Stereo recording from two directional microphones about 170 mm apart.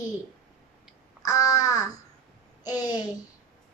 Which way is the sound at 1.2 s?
20° left (ahead or behind).